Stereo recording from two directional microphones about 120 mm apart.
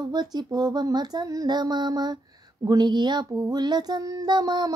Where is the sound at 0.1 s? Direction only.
35° right (ahead or behind).